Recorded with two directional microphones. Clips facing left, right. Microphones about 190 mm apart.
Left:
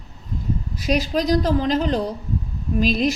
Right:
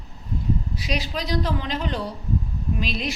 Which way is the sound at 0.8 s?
45° left (ahead or behind).